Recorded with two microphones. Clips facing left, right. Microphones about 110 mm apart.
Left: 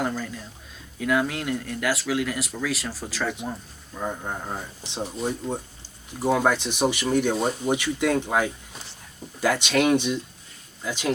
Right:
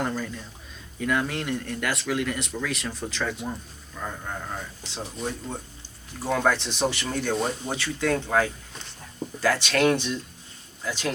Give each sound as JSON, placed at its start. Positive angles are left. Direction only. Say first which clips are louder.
{"t": 0.0, "sound": "speech", "louder": "left 1 dB", "side_deg": 0}
{"t": 3.9, "sound": "speech", "louder": "left 4 dB", "side_deg": 20}
{"t": 4.9, "sound": "speech", "louder": "left 4 dB", "side_deg": 5}